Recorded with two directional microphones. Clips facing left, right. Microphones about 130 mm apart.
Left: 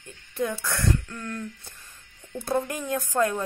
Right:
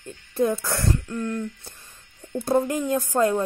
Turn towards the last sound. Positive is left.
turn(degrees=-25)  # may be behind; listen again after turning